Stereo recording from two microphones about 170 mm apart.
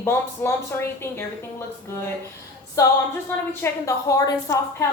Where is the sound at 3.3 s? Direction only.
15° left (ahead or behind).